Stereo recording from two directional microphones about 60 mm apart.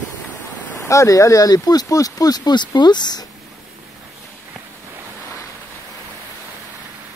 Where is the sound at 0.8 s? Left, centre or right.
Left.